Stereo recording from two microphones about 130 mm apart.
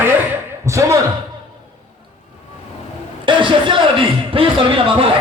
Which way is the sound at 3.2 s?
40° right (ahead or behind).